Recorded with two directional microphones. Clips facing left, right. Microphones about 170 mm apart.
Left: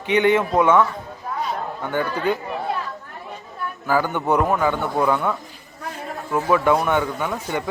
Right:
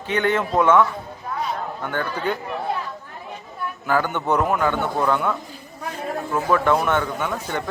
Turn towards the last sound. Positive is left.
turn(degrees=10)  # may be behind; listen again after turning